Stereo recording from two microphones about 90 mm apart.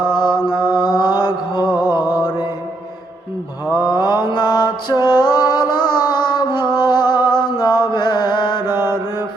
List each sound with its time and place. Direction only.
0.0 s mantra: 50° left (ahead or behind)
3.8 s mantra: 50° left (ahead or behind)
5.2 s music: 50° left (ahead or behind)
7.9 s mantra: 50° left (ahead or behind)
8.6 s mantra: 25° right (ahead or behind)